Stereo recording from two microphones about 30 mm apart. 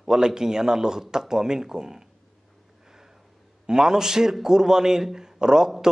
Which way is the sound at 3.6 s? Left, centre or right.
Right.